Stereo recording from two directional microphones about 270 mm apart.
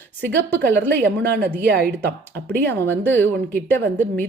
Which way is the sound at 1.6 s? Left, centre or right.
Right.